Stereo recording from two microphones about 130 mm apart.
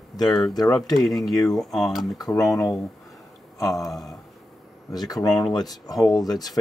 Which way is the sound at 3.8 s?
Centre (ahead or behind).